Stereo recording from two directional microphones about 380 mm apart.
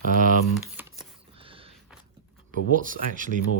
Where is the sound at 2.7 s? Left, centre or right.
Right.